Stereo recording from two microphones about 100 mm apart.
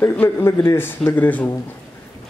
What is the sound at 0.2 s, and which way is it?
A man's voice, 25° left (ahead or behind).